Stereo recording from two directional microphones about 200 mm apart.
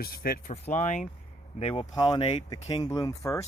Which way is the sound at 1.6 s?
25° left (ahead or behind).